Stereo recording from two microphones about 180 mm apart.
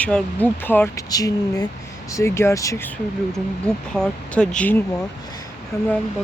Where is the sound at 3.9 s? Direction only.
5° left (ahead or behind).